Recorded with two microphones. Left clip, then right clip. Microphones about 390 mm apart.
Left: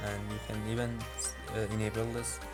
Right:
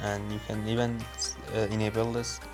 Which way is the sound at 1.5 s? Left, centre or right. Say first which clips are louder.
Right 6 dB; left.